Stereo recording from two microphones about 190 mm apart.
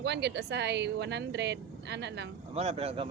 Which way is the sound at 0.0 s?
65° right (ahead or behind).